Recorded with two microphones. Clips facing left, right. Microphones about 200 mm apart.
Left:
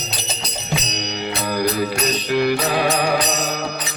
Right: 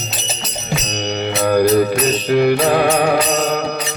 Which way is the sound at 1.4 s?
50° right (ahead or behind).